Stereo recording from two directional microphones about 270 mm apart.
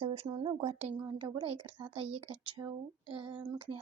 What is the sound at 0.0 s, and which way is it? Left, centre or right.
A woman's voice, right.